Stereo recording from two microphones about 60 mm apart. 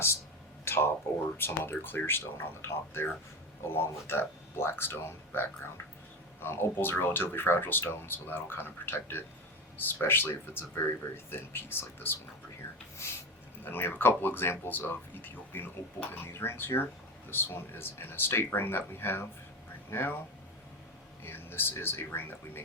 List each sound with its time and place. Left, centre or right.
0.6 s a sound: left
1.1 s speech: left
1.4 s speech: left
13.7 s speech: left
21.2 s speech: left